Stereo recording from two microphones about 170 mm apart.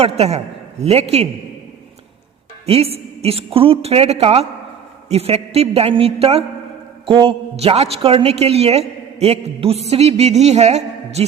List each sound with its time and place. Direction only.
0.0 s a man's voice: 40° right (ahead or behind)
2.6 s a woman's voice: 35° right (ahead or behind)